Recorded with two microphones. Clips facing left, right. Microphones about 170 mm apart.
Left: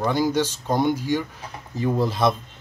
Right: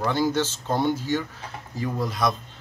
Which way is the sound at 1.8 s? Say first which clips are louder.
Left 5 dB; 25° left (ahead or behind).